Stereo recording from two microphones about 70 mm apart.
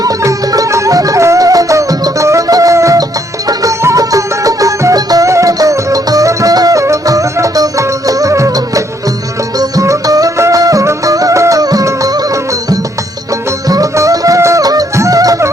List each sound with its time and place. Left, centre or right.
0.0 s music: right